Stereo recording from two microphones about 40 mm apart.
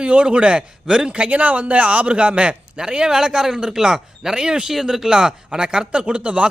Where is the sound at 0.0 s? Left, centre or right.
Right.